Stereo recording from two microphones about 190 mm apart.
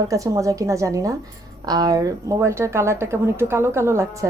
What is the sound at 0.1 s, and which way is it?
Speech, 15° right (ahead or behind).